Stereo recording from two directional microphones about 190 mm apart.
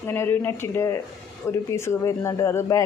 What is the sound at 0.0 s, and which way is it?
Speech, 10° left (ahead or behind).